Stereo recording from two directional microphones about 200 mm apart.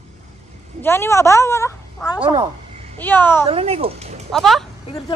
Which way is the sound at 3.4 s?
30° right (ahead or behind).